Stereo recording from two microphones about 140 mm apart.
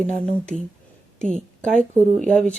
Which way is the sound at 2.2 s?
5° left (ahead or behind).